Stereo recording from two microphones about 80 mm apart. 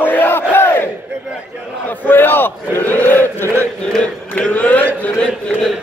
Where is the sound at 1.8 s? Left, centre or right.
Left.